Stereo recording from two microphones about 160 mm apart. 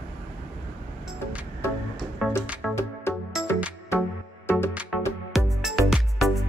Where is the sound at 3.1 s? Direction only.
15° left (ahead or behind).